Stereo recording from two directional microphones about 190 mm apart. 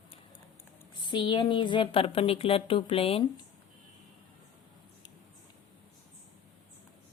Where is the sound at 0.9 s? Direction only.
25° left (ahead or behind).